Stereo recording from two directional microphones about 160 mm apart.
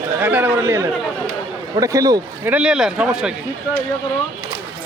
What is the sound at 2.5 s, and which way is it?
Speech, 5° right (ahead or behind).